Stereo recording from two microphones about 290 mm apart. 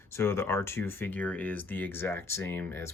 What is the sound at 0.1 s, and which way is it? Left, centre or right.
Speech, centre.